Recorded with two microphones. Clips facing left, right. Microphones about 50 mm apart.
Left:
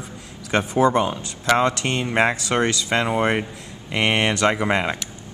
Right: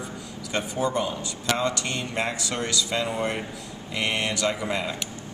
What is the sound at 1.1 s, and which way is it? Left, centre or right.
Speech, left.